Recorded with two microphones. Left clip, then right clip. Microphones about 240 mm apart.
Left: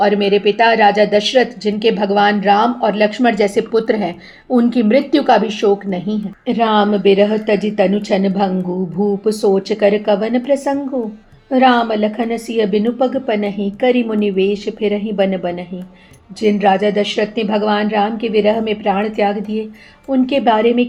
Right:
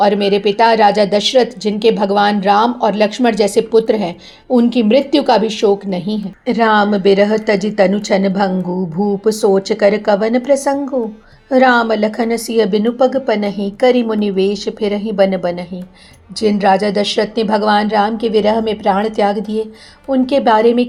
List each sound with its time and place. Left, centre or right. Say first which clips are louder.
0.0 s a woman's voice: right 1 dB; centre